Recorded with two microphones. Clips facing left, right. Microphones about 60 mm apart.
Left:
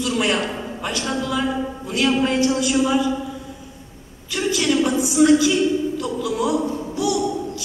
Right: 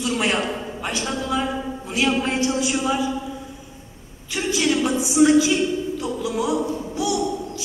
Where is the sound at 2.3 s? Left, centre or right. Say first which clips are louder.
Left 3 dB; left.